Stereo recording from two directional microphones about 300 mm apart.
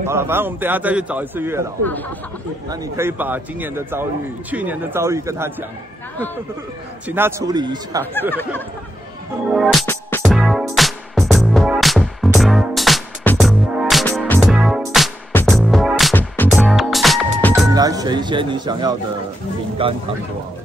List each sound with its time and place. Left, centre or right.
0.0 s a man's voice: centre
2.7 s a man's voice: centre
7.1 s a man's voice: centre
8.0 s speech: centre
9.5 s music: centre
17.6 s a man's voice: centre